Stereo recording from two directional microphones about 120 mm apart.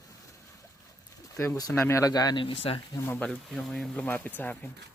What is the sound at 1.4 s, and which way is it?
Speech, 25° left (ahead or behind).